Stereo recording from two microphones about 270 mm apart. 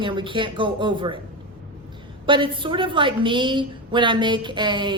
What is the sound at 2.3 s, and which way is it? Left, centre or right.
A woman's voice, centre.